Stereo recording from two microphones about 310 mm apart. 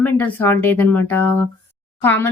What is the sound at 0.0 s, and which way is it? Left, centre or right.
Speech, centre.